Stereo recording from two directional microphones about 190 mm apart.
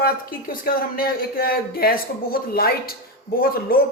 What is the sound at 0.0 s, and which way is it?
Speech, 50° left (ahead or behind).